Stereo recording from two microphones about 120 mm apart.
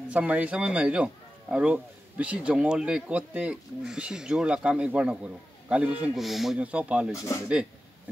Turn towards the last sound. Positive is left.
turn(degrees=30)  # may be behind; listen again after turning